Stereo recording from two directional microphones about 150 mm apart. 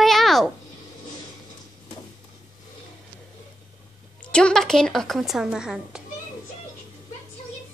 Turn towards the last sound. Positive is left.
turn(degrees=-5)  # may be behind; listen again after turning